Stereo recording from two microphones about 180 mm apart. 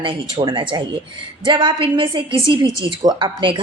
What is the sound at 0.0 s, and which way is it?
A woman's voice, 30° right (ahead or behind).